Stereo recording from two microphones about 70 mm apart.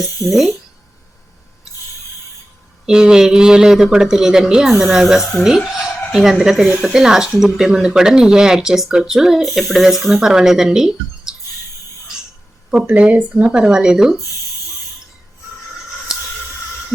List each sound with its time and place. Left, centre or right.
2.8 s speech: centre
12.9 s speech: centre